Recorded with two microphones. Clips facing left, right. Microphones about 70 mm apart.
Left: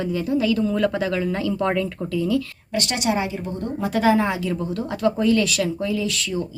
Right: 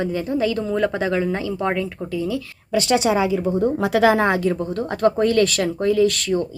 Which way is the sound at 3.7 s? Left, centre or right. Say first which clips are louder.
Even; right.